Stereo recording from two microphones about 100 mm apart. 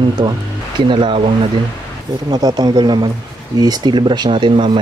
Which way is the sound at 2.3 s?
40° right (ahead or behind).